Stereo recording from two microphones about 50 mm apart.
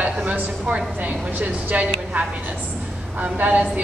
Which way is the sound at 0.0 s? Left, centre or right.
Right.